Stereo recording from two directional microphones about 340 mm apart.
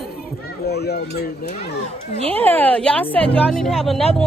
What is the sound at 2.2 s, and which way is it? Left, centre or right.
Speech, centre.